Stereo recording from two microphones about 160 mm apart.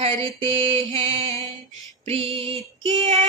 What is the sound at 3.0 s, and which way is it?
Music, 45° right (ahead or behind).